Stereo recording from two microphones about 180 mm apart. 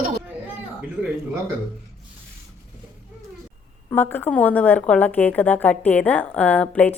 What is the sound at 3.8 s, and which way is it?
A woman's voice, 10° left (ahead or behind).